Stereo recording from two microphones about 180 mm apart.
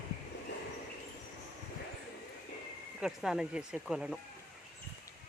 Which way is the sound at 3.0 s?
5° right (ahead or behind).